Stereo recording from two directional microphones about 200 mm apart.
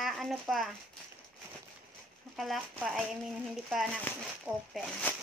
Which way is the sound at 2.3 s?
Centre (ahead or behind).